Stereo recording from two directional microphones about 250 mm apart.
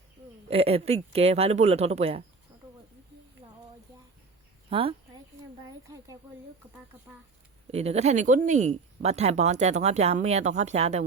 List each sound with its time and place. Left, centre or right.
0.5 s speech: right
4.7 s speech: right
7.7 s speech: right